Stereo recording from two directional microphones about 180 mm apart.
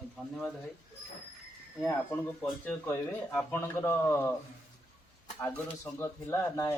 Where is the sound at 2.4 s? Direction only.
5° left (ahead or behind).